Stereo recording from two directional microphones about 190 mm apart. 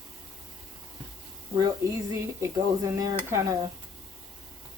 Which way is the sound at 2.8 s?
15° right (ahead or behind).